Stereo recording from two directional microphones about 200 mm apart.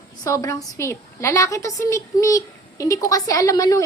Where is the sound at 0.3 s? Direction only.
15° left (ahead or behind).